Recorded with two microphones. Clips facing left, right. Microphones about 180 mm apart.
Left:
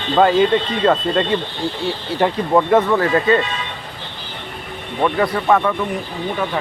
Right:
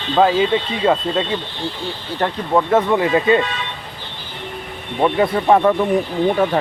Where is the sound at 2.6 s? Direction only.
Centre (ahead or behind).